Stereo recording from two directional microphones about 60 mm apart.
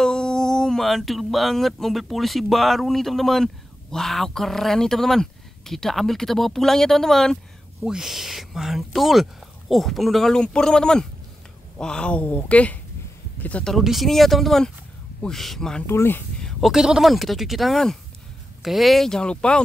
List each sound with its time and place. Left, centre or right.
0.0 s speech: centre
7.8 s speech: centre; by 13.7 s left
13.8 s speech: centre
15.9 s speech: left
16.6 s speech: centre